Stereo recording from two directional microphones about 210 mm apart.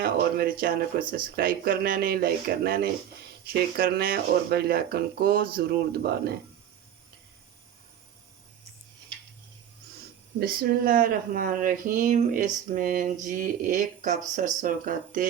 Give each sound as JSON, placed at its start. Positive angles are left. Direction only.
{"t": 0.0, "sound": "speech", "side_deg": -45}
{"t": 10.4, "sound": "speech", "side_deg": -45}